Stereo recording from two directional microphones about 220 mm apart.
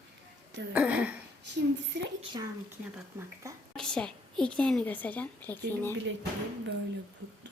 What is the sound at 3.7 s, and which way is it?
A woman's voice, 5° left (ahead or behind).